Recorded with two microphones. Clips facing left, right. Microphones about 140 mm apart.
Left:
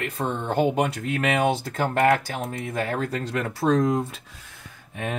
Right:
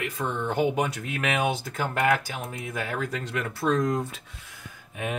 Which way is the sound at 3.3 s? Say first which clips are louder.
Left 4 dB; 35° left (ahead or behind).